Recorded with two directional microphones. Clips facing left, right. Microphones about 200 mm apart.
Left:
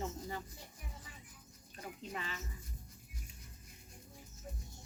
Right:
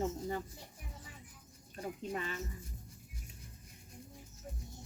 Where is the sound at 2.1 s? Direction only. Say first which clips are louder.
Right 3 dB; 45° right (ahead or behind).